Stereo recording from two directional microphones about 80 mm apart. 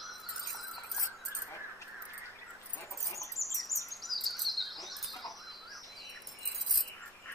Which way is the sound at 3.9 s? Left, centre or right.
Centre.